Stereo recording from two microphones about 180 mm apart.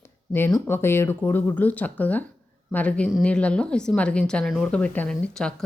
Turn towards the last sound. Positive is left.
turn(degrees=5)  # may be behind; listen again after turning